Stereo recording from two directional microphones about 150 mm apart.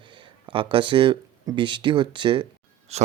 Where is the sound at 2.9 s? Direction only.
45° right (ahead or behind).